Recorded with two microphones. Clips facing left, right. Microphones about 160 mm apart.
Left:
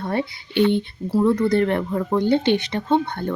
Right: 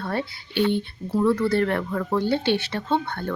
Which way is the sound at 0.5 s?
55° left (ahead or behind).